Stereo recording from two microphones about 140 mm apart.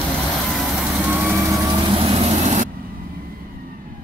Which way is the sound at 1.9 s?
40° right (ahead or behind).